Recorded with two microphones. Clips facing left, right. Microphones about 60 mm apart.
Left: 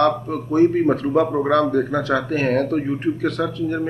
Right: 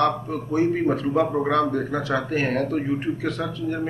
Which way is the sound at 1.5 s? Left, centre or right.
Left.